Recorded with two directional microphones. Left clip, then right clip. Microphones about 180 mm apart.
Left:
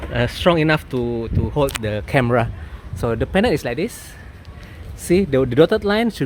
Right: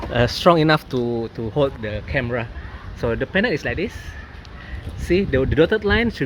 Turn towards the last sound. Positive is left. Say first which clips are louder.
# left 1 dB
turn(degrees=25)  # may be behind; listen again after turning